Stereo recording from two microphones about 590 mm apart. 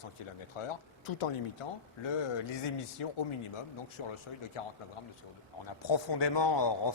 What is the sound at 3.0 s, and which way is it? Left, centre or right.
A man's voice, left.